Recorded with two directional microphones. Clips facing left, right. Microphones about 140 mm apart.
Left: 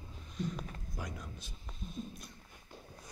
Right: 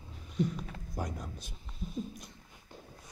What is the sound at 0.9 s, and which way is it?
Speech, 40° right (ahead or behind).